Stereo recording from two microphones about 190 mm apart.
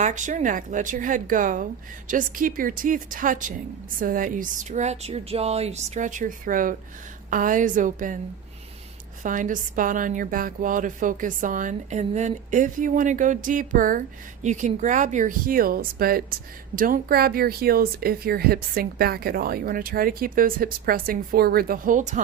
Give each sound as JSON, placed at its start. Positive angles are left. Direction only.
{"t": 0.0, "sound": "speech", "side_deg": -40}
{"t": 9.2, "sound": "speech", "side_deg": -45}